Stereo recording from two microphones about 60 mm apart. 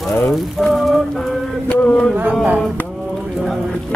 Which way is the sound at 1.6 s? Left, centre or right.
Centre.